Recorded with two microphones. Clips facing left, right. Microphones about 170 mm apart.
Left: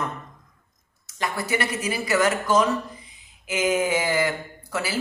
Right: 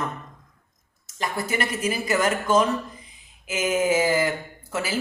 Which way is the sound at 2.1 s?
25° right (ahead or behind).